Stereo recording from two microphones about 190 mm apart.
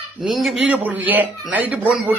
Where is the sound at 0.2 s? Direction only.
Centre (ahead or behind).